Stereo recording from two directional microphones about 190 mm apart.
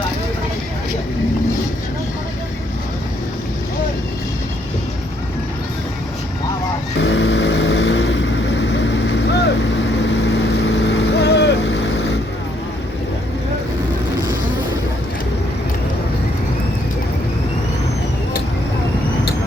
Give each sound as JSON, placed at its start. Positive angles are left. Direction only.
{"t": 7.0, "sound": "vehicle", "side_deg": 75}
{"t": 10.7, "sound": "vehicle", "side_deg": 65}